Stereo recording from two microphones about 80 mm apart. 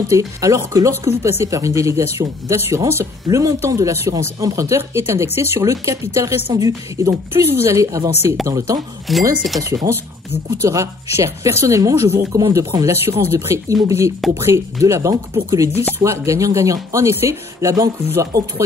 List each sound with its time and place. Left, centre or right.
0.1 s speech: right
9.1 s speech: centre
9.9 s speech: right